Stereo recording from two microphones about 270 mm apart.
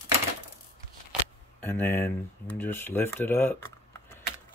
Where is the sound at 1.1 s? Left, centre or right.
Centre.